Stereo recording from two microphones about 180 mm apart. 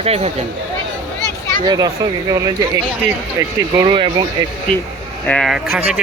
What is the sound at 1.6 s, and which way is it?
Speech, 20° right (ahead or behind).